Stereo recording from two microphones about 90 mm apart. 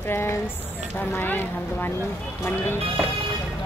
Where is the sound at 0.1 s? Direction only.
25° left (ahead or behind).